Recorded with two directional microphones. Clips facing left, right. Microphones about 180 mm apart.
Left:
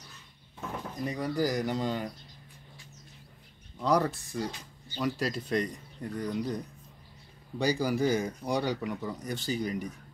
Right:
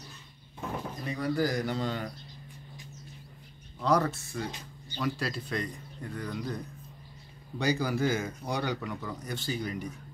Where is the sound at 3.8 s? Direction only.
15° left (ahead or behind).